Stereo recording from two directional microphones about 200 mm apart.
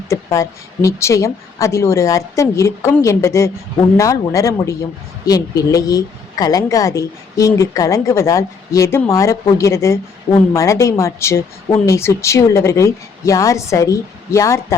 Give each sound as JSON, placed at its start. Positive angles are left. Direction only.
{"t": 0.1, "sound": "a woman's voice", "side_deg": 15}